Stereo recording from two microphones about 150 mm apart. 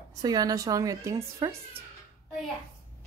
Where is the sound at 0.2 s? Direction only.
25° right (ahead or behind).